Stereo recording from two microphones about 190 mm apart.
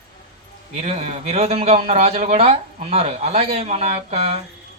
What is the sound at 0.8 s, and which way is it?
A man's voice, 35° right (ahead or behind).